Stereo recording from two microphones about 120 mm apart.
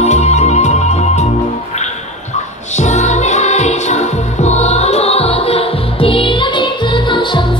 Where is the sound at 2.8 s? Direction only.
75° left (ahead or behind).